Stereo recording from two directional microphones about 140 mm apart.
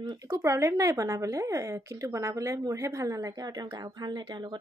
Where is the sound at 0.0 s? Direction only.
25° right (ahead or behind).